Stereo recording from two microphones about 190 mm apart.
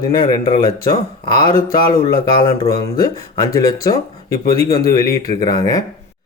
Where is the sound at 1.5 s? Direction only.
20° left (ahead or behind).